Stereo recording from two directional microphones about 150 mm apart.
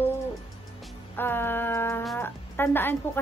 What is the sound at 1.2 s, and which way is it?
A woman's voice, 15° left (ahead or behind).